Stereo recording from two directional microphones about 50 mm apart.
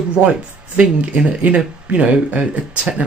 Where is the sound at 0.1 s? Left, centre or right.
Right.